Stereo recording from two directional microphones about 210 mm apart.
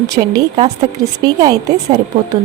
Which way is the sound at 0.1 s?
15° right (ahead or behind).